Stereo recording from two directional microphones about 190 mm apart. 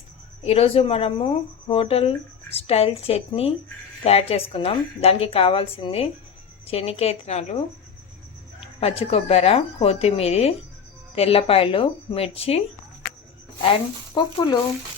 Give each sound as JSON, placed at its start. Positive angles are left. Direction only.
{"t": 0.4, "sound": "a woman's voice", "side_deg": 30}
{"t": 8.6, "sound": "a woman's voice", "side_deg": 30}
{"t": 13.6, "sound": "speech", "side_deg": 25}